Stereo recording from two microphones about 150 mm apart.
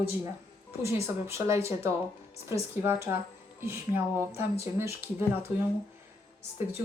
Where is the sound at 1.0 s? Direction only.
20° right (ahead or behind).